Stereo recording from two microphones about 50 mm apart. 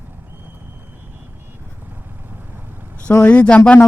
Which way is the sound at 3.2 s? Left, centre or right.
Left.